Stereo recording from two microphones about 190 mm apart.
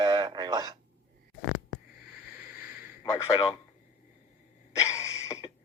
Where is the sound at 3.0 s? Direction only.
15° left (ahead or behind).